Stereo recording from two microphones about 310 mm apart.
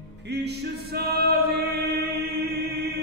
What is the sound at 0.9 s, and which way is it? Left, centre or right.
Male singing, right.